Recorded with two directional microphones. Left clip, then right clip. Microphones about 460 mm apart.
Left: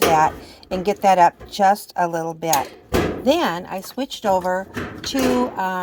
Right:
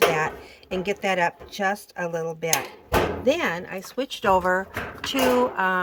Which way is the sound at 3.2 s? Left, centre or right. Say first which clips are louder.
Left 4 dB; centre.